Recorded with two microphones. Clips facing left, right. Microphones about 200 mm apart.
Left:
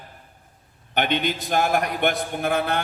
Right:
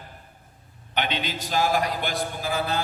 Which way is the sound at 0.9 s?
55° left (ahead or behind).